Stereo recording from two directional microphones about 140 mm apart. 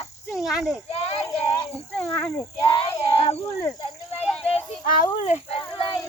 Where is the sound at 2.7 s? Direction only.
40° left (ahead or behind).